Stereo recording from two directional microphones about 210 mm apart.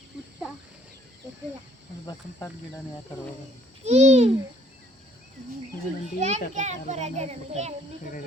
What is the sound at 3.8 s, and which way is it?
Speech, 30° right (ahead or behind).